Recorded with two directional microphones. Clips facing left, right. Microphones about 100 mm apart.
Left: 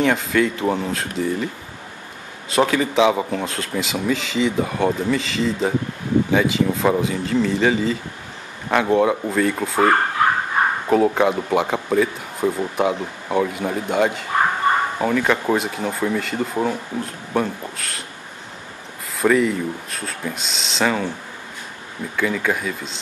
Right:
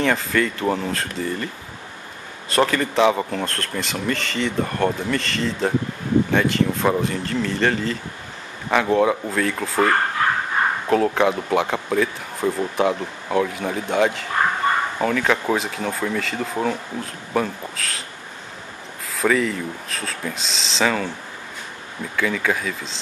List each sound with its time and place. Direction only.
0.0 s speech: centre (ahead or behind)
10.9 s speech: 5° left (ahead or behind)
19.1 s speech: 5° left (ahead or behind)
22.1 s speech: 5° left (ahead or behind)